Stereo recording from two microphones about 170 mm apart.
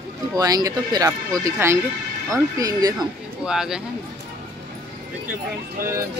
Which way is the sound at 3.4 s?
5° right (ahead or behind).